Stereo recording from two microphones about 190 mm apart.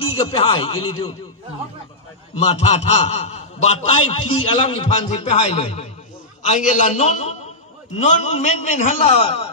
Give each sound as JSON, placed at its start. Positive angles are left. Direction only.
{"t": 0.1, "sound": "a man's voice", "side_deg": 30}
{"t": 2.3, "sound": "a man's voice", "side_deg": 35}
{"t": 9.2, "sound": "a sound", "side_deg": 30}